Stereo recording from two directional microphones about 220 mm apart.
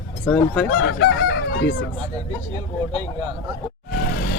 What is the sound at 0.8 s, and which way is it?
Fowl, 60° left (ahead or behind).